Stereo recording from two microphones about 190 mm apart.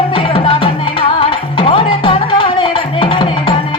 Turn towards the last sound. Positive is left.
turn(degrees=25)  # may be behind; listen again after turning